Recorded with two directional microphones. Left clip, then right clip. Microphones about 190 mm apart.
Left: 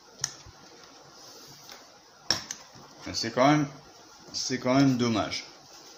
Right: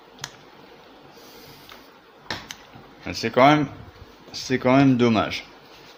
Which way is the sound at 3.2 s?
50° right (ahead or behind).